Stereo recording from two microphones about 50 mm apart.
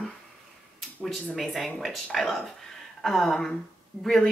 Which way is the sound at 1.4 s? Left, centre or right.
Centre.